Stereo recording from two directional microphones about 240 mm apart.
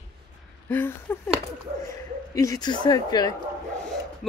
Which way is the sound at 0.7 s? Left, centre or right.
Centre.